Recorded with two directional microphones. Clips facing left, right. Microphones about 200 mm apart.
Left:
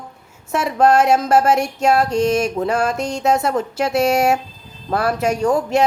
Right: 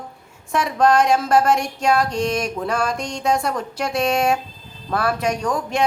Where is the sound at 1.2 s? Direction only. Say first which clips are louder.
Left 2 dB; 5° left (ahead or behind).